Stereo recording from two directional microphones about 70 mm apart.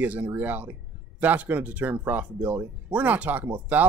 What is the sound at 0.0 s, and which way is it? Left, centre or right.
Speech, right.